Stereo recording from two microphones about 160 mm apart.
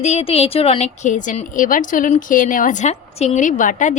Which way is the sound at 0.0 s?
40° left (ahead or behind).